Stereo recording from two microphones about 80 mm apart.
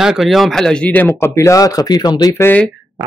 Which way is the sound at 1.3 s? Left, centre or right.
Left.